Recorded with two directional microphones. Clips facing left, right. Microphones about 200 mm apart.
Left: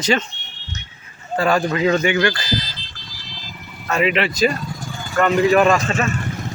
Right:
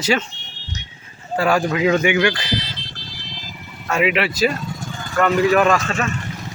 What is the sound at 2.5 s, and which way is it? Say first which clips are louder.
Speech: left 1 dB; 65° right (ahead or behind).